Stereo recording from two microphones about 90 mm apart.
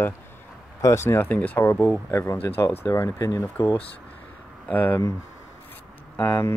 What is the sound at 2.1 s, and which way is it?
Speech, 35° left (ahead or behind).